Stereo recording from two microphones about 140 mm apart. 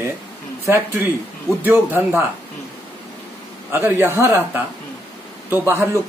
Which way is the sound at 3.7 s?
15° right (ahead or behind).